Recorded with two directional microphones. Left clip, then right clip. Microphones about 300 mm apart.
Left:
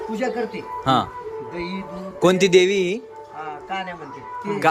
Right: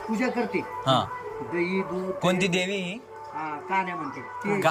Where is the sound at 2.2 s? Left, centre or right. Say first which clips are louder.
Left 11 dB; centre.